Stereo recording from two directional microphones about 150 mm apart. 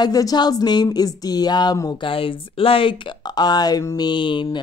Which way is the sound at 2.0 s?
35° left (ahead or behind).